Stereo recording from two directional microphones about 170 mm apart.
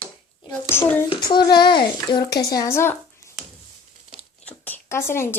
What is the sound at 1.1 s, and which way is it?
Speech, 25° left (ahead or behind).